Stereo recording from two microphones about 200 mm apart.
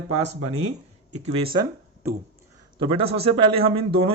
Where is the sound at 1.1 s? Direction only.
30° right (ahead or behind).